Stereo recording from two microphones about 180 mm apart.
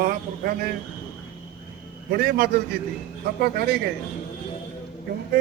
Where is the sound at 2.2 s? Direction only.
60° right (ahead or behind).